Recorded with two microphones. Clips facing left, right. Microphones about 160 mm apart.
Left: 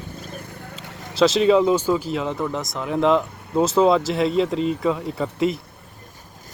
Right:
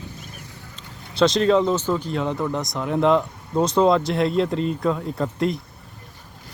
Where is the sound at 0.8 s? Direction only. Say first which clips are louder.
Left 5 dB; 80° left.